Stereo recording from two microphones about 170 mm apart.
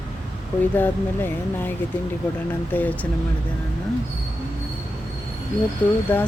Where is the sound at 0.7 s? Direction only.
10° left (ahead or behind).